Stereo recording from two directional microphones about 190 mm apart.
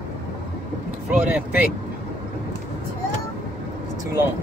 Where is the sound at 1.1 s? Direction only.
5° right (ahead or behind).